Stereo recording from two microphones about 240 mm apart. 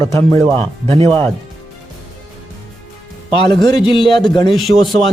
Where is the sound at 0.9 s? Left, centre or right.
Right.